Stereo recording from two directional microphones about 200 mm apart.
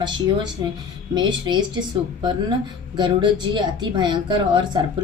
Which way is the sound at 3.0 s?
25° right (ahead or behind).